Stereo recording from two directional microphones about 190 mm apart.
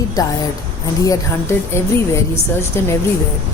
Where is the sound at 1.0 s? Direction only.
15° left (ahead or behind).